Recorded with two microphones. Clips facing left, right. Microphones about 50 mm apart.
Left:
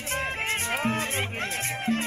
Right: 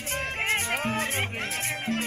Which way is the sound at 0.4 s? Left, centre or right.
Right.